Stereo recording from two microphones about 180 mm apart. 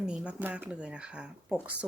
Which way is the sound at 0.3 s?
10° right (ahead or behind).